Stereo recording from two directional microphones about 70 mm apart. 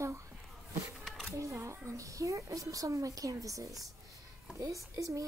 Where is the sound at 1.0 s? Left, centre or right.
Centre.